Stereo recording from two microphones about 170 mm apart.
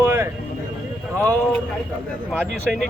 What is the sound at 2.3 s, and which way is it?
Speech, 5° right (ahead or behind).